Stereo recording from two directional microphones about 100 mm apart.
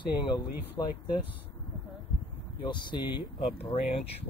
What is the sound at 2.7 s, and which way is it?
Speech, 50° left (ahead or behind).